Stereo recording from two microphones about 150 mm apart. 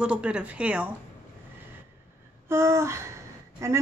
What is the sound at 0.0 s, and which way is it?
Speech, 5° right (ahead or behind).